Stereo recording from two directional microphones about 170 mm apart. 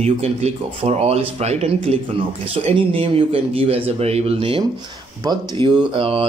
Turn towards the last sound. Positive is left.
turn(degrees=-35)  # may be behind; listen again after turning